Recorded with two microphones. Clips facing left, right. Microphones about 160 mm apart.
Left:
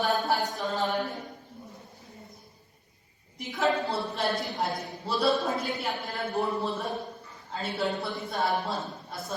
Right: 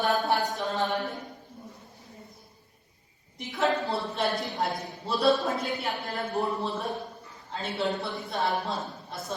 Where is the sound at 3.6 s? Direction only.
Centre (ahead or behind).